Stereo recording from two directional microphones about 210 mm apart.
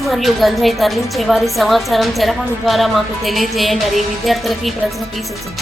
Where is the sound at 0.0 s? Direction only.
Centre (ahead or behind).